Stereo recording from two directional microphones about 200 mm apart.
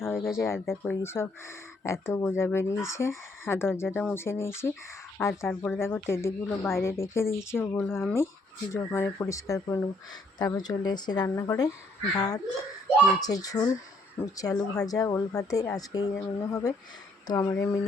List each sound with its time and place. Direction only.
0.3 s speech: 15° left (ahead or behind)
0.6 s speech: centre (ahead or behind)
1.0 s a woman's voice: 10° left (ahead or behind)
13.1 s speech: 20° left (ahead or behind)